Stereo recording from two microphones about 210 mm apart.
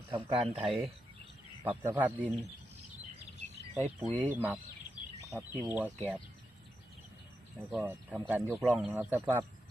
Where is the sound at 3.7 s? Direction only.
10° right (ahead or behind).